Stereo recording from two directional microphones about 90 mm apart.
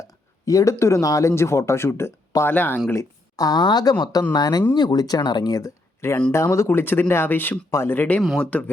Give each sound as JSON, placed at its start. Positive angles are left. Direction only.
{"t": 0.0, "sound": "speech", "side_deg": 40}
{"t": 2.9, "sound": "speech", "side_deg": 40}